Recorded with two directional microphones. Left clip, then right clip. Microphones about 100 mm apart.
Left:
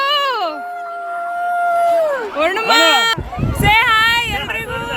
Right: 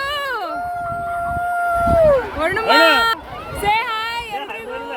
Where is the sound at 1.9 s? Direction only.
20° left (ahead or behind).